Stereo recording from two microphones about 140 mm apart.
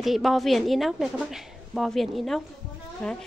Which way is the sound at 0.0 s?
Centre (ahead or behind).